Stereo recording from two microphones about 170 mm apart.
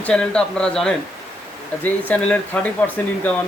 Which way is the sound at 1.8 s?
10° left (ahead or behind).